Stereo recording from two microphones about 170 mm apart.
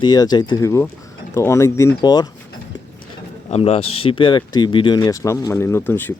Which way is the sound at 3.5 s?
35° left (ahead or behind).